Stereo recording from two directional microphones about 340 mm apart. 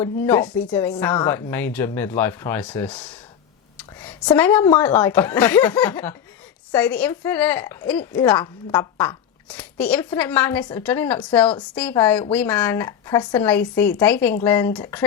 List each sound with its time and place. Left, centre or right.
0.0 s speech: centre
3.8 s a sound: centre
4.8 s speech: centre